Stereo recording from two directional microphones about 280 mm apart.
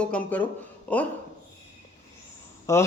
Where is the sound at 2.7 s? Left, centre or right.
Centre.